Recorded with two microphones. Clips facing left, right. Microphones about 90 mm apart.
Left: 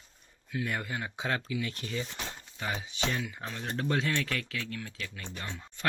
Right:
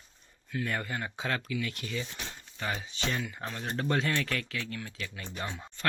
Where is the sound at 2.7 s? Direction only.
15° left (ahead or behind).